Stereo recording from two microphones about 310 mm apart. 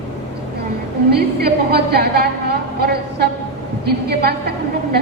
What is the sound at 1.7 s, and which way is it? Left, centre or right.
A woman's voice, right.